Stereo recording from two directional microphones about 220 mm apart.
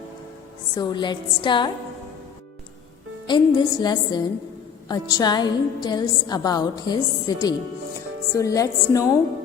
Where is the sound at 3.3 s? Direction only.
20° left (ahead or behind).